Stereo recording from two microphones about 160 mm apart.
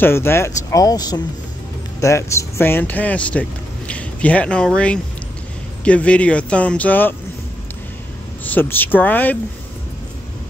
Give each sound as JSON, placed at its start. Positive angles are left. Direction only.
{"t": 0.0, "sound": "speech", "side_deg": 15}
{"t": 8.5, "sound": "speech", "side_deg": 10}